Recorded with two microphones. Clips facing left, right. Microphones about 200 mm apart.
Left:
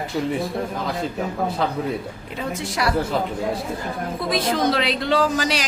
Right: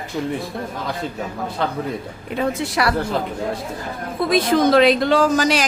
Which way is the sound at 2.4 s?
65° right (ahead or behind).